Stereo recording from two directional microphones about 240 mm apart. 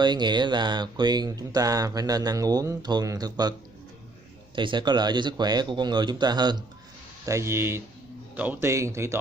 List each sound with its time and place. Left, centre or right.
0.0 s speech: centre
4.6 s speech: centre